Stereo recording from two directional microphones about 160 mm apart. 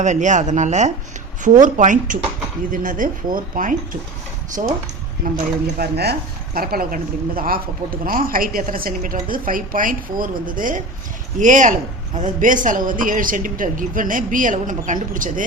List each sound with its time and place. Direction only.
0.0 s speech: 50° right (ahead or behind)
5.2 s speech: 60° right (ahead or behind)
5.7 s speech: 80° right; by 15.4 s 55° right (ahead or behind)